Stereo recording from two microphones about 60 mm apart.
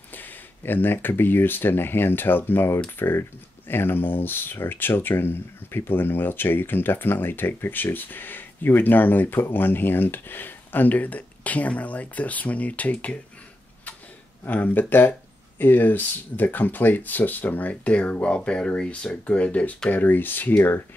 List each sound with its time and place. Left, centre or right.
0.1 s speech: left
14.4 s speech: left